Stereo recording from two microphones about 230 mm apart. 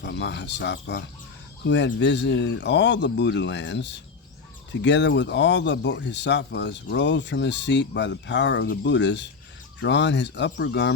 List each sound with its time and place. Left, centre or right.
0.0 s speech: left